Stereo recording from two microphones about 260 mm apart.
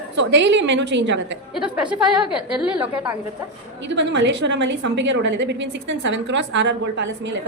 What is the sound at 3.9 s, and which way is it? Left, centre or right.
A woman's voice, right.